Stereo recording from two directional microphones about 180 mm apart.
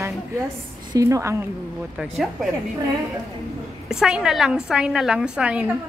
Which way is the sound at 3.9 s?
5° right (ahead or behind).